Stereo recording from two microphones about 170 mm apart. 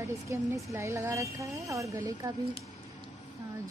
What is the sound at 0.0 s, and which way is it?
Speech, 15° right (ahead or behind).